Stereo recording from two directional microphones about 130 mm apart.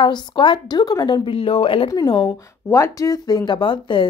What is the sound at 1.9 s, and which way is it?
Speech, 30° left (ahead or behind).